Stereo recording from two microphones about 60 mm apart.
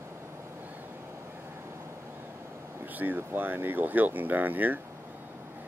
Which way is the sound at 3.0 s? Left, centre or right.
Right.